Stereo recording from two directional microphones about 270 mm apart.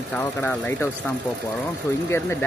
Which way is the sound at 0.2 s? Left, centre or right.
Centre.